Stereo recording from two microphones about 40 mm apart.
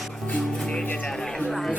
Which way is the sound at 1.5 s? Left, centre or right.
Centre.